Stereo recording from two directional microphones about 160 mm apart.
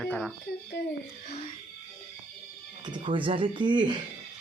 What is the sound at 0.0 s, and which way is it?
Speech, 5° left (ahead or behind).